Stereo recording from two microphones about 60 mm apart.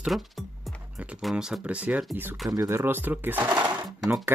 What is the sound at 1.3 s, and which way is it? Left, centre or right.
Speech, centre.